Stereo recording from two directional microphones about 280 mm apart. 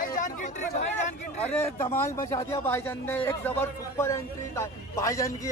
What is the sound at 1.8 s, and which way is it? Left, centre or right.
A man's voice, centre.